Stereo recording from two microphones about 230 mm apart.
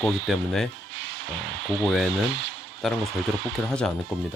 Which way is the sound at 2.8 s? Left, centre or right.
Centre.